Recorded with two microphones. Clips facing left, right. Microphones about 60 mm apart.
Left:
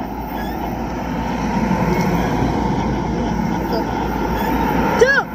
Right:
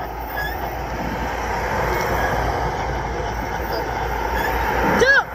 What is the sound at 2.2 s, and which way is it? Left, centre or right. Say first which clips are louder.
Vehicle: left 2 dB; right.